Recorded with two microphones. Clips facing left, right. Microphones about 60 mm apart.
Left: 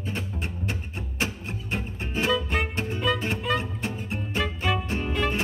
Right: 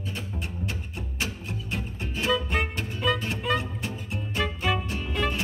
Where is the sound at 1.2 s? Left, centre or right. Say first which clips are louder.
Left 3 dB; left.